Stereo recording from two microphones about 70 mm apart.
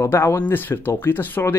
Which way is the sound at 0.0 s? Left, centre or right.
Left.